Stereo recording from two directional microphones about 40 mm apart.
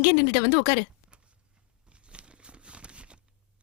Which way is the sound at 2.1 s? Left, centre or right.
Right.